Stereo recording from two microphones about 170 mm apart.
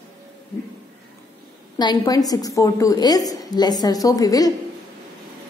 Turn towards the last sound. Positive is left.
turn(degrees=20)  # may be behind; listen again after turning